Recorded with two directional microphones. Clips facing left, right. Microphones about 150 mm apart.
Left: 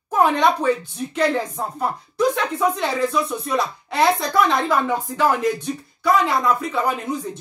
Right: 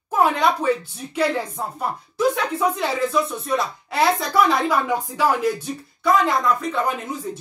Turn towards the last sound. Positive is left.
turn(degrees=0)  # may be behind; listen again after turning